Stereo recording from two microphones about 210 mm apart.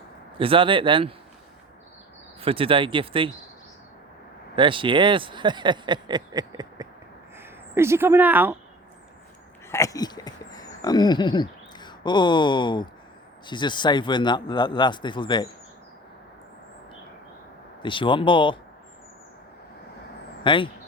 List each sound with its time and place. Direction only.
0.3 s speech: 25° right (ahead or behind)
2.4 s speech: 25° right (ahead or behind)
4.5 s speech: 25° right (ahead or behind); by 8.5 s 10° right (ahead or behind)
9.6 s a sound: 15° left (ahead or behind)
13.5 s speech: 20° left (ahead or behind)
17.8 s speech: 25° left (ahead or behind)
20.4 s speech: 25° left (ahead or behind)